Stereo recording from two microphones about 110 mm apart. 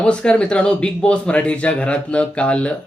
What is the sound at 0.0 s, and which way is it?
Speech, 10° left (ahead or behind).